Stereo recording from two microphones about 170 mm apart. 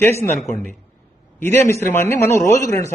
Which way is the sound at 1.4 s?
15° left (ahead or behind).